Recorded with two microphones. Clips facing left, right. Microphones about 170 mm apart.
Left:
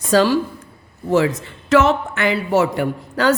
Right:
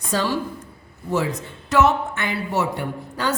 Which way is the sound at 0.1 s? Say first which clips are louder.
Left 8 dB; 90° left.